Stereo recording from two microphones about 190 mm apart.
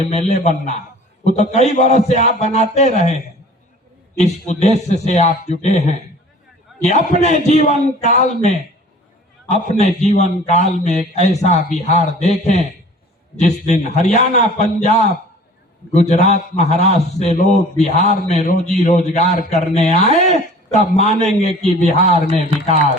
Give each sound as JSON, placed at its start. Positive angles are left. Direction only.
{"t": 0.3, "sound": "a man's voice", "side_deg": 35}
{"t": 4.2, "sound": "a man's voice", "side_deg": 40}
{"t": 6.8, "sound": "a man's voice", "side_deg": 35}